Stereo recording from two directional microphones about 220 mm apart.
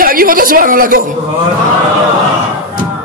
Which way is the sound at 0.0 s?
40° right (ahead or behind).